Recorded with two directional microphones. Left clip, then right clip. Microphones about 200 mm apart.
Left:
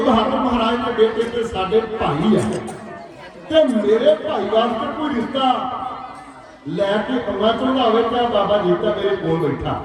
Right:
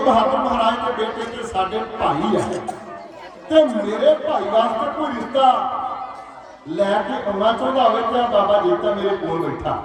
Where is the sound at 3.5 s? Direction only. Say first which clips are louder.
Left 1 dB; 25° right (ahead or behind).